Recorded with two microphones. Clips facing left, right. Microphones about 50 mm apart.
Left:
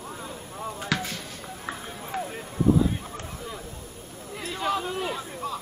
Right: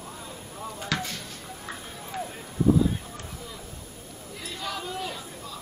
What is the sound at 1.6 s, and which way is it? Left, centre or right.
Run, centre.